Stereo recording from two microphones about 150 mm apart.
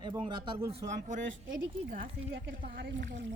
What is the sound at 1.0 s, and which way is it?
Speech, 60° right (ahead or behind).